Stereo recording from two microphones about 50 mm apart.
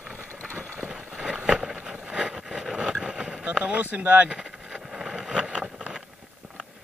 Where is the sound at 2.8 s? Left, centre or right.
Right.